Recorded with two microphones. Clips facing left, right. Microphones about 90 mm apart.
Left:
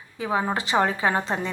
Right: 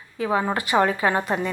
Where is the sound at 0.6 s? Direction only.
25° left (ahead or behind).